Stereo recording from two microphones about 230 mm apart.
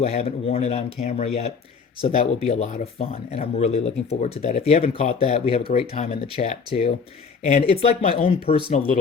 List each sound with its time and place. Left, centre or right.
0.0 s speech: left